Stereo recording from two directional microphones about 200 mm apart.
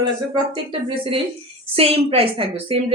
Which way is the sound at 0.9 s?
25° right (ahead or behind).